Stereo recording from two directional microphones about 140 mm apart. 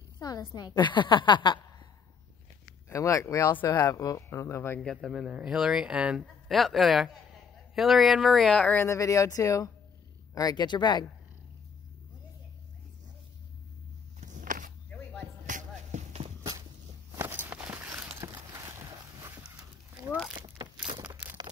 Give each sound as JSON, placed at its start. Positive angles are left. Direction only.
{"t": 0.2, "sound": "a woman's voice", "side_deg": 25}
{"t": 2.9, "sound": "speech", "side_deg": 20}
{"t": 5.0, "sound": "a man's voice", "side_deg": -5}
{"t": 14.2, "sound": "walk", "side_deg": -65}
{"t": 14.9, "sound": "music", "side_deg": 10}
{"t": 15.4, "sound": "music", "side_deg": -60}
{"t": 17.1, "sound": "walk", "side_deg": -15}
{"t": 17.9, "sound": "clip-clop", "side_deg": -10}
{"t": 18.6, "sound": "a sound", "side_deg": -20}
{"t": 20.3, "sound": "a sound", "side_deg": -35}